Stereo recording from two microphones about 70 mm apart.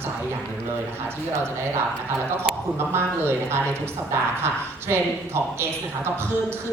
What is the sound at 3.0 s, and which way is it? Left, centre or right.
A man's voice, right.